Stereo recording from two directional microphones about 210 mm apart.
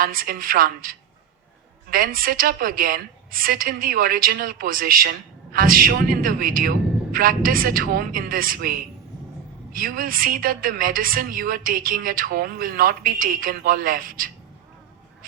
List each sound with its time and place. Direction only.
0.0 s a woman's voice: 45° right (ahead or behind)